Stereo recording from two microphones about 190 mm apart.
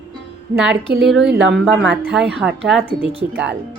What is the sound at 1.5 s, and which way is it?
Speech, centre (ahead or behind).